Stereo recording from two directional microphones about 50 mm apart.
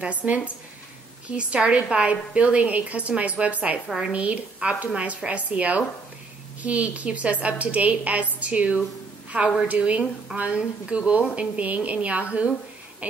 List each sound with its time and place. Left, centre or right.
0.0 s a woman's voice: right
3.8 s a woman's voice: centre
4.1 s a woman's voice: right
13.0 s owl: right